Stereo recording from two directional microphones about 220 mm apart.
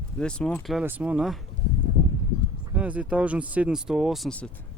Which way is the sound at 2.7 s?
5° right (ahead or behind).